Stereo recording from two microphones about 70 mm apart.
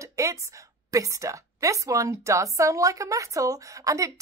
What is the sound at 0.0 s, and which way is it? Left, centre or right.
A woman's voice, right.